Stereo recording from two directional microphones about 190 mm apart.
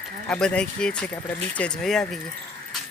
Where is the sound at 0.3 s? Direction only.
5° left (ahead or behind).